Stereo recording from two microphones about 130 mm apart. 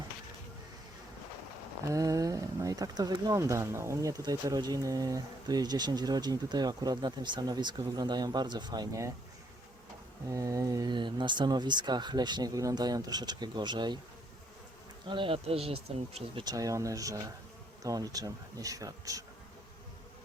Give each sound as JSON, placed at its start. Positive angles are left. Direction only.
{"t": 1.9, "sound": "speech", "side_deg": -25}
{"t": 10.2, "sound": "speech", "side_deg": -25}
{"t": 15.1, "sound": "speech", "side_deg": -45}
{"t": 16.4, "sound": "bee", "side_deg": -30}